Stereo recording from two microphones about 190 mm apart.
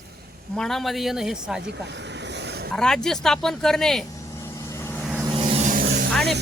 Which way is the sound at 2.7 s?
5° left (ahead or behind).